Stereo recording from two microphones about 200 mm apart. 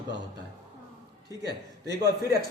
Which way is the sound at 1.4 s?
55° right (ahead or behind).